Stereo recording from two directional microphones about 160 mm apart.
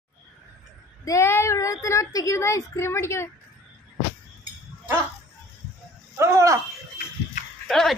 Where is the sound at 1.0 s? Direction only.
15° left (ahead or behind).